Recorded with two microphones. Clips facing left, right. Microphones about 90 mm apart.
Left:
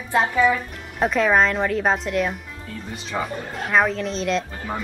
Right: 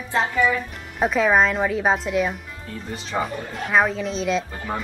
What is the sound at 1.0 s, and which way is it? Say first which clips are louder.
Speech: even; centre (ahead or behind).